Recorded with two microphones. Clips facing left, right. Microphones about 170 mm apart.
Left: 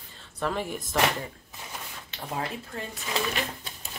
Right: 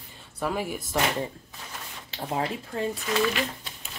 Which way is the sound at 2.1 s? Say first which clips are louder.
Right 4 dB; 30° right (ahead or behind).